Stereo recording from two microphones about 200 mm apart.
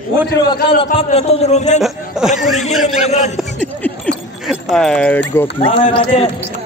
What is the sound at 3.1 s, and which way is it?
Speech, 35° left (ahead or behind).